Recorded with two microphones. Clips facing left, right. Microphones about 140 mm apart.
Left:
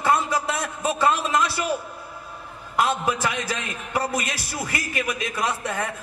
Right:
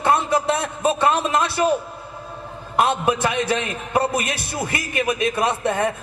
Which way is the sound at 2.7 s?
25° right (ahead or behind).